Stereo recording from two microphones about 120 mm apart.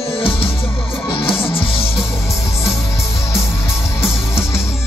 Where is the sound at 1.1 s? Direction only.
50° left (ahead or behind).